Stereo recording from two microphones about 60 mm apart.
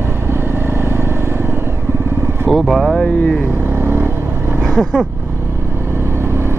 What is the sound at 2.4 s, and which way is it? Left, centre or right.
Speech, centre.